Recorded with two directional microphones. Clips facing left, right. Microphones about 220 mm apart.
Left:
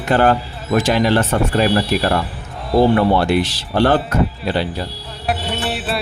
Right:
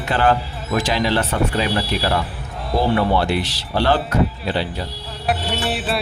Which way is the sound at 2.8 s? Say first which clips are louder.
Left 5 dB; 50° left (ahead or behind).